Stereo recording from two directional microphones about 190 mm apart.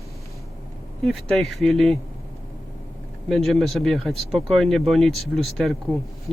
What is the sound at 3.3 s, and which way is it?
Speech, centre (ahead or behind).